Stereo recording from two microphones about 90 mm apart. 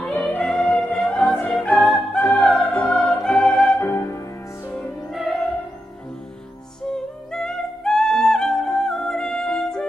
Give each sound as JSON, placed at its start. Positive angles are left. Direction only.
{"t": 0.3, "sound": "music", "side_deg": 15}
{"t": 3.8, "sound": "music", "side_deg": 30}
{"t": 5.1, "sound": "music", "side_deg": 0}
{"t": 7.3, "sound": "music", "side_deg": 5}